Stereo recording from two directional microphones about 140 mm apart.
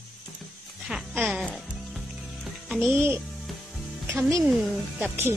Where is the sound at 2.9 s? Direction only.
15° right (ahead or behind).